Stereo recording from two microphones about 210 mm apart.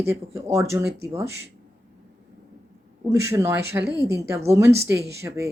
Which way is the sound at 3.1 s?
15° right (ahead or behind).